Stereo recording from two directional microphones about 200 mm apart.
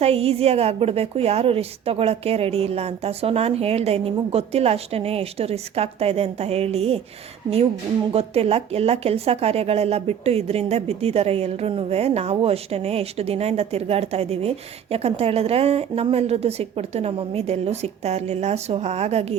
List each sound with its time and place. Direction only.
0.0 s speech: 30° right (ahead or behind)
8.1 s speech: 30° right (ahead or behind)